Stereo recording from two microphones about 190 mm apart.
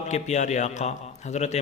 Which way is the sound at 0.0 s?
35° left (ahead or behind).